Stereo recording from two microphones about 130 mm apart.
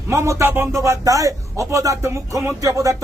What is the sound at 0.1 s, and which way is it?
Speech, 20° right (ahead or behind).